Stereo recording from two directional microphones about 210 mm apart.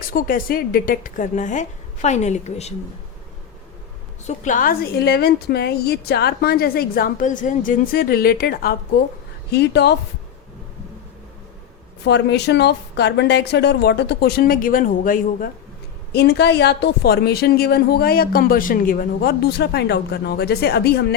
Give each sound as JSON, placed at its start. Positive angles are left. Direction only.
{"t": 0.1, "sound": "a woman's voice", "side_deg": 40}
{"t": 4.3, "sound": "speech", "side_deg": 40}
{"t": 12.0, "sound": "speech", "side_deg": 55}
{"t": 16.1, "sound": "speech", "side_deg": 50}